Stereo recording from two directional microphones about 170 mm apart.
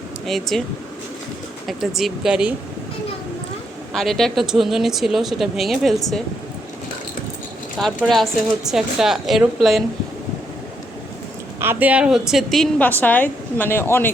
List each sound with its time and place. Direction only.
0.3 s a woman's voice: centre (ahead or behind)
1.6 s a woman's voice: centre (ahead or behind)
3.9 s a woman's voice: centre (ahead or behind)
7.8 s a woman's voice: centre (ahead or behind)
11.6 s a woman's voice: 10° right (ahead or behind); by 14.1 s 15° left (ahead or behind)